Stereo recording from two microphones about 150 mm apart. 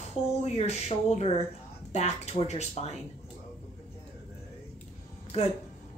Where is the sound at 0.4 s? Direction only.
45° left (ahead or behind).